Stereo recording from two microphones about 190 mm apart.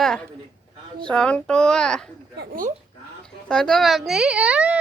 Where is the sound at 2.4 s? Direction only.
45° right (ahead or behind).